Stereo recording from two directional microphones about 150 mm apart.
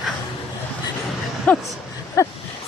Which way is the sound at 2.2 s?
20° left (ahead or behind).